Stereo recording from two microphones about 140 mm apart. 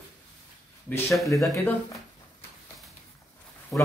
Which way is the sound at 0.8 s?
15° left (ahead or behind).